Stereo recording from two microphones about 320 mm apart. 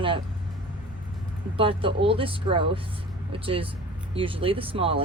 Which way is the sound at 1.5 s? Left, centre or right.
Centre.